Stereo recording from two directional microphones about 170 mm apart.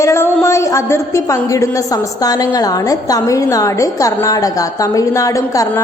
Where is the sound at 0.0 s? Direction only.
15° left (ahead or behind).